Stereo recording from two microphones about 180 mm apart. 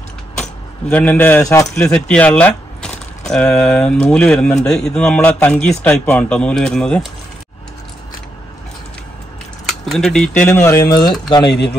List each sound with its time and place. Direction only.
0.4 s speech: 5° left (ahead or behind)
1.8 s speech: 5° left (ahead or behind)
9.7 s speech: centre (ahead or behind); by 11.5 s 25° left (ahead or behind)